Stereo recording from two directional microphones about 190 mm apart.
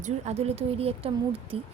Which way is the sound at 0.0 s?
35° right (ahead or behind).